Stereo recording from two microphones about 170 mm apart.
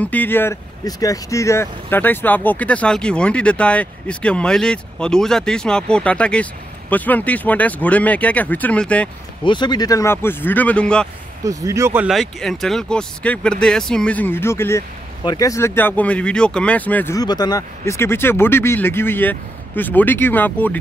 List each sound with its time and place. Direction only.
0.0 s speech: 10° left (ahead or behind)
9.4 s speech: 25° left (ahead or behind); by 11.1 s 5° left (ahead or behind)
11.4 s speech: 20° right (ahead or behind)
12.1 s speech: centre (ahead or behind)